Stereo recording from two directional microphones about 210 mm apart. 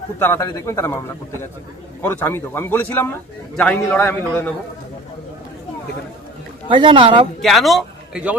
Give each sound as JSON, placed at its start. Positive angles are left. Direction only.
{"t": 0.2, "sound": "speech", "side_deg": 15}
{"t": 2.0, "sound": "speech", "side_deg": 10}
{"t": 6.7, "sound": "speech", "side_deg": -25}
{"t": 7.4, "sound": "a man's voice", "side_deg": 0}